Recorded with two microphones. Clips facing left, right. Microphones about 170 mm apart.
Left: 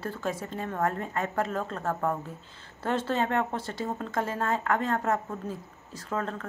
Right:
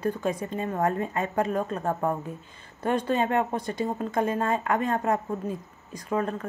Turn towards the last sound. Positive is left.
turn(degrees=-15)  # may be behind; listen again after turning